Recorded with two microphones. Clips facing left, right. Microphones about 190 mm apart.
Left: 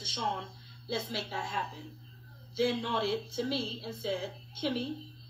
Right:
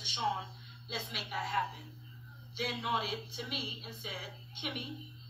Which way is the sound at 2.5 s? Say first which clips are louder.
Left 8 dB; 50° left (ahead or behind).